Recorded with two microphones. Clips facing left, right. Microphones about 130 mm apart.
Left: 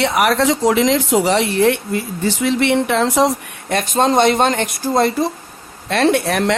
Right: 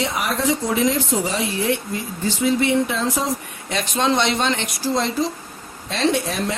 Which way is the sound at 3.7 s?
45° left (ahead or behind).